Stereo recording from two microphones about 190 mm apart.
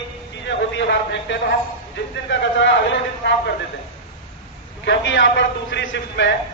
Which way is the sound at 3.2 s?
65° left (ahead or behind).